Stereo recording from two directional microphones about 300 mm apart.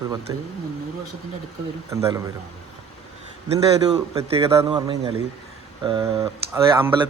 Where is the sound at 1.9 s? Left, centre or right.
Centre.